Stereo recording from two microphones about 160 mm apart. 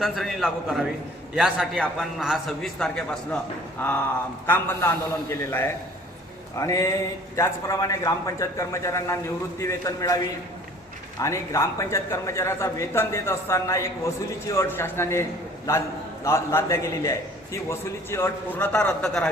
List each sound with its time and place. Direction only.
0.0 s a man's voice: centre (ahead or behind); by 10.2 s 20° left (ahead or behind)
11.2 s a man's voice: 20° left (ahead or behind)
16.2 s a man's voice: 15° left (ahead or behind)